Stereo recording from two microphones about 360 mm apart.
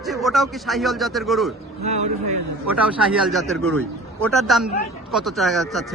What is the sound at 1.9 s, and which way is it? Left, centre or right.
Speech, centre.